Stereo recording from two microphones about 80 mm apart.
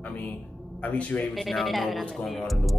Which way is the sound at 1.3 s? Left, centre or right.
Centre.